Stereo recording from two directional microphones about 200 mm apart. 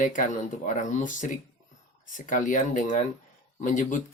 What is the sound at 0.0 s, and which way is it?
Speech, 40° left (ahead or behind).